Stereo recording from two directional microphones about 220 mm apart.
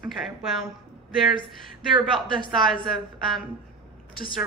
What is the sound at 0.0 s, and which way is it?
Speech, centre (ahead or behind).